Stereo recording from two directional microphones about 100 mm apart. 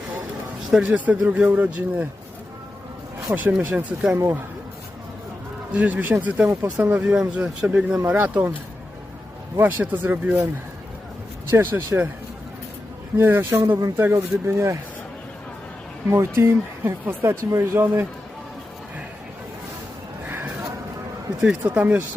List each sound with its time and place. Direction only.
0.8 s speech: 15° right (ahead or behind)
3.2 s speech: 15° right (ahead or behind)
5.7 s speech: 15° right (ahead or behind)
9.6 s speech: 15° right (ahead or behind)
11.5 s speech: 20° right (ahead or behind)
13.1 s speech: 20° right (ahead or behind)
16.0 s speech: 25° right (ahead or behind)
20.2 s a sound: 20° right (ahead or behind)
21.8 s speech: 15° right (ahead or behind)